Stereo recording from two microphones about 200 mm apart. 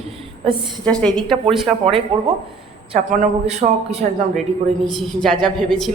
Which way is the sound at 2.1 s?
30° right (ahead or behind).